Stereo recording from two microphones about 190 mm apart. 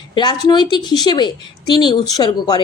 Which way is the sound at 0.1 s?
25° left (ahead or behind).